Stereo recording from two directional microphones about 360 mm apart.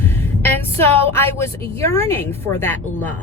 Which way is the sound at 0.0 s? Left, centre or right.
Centre.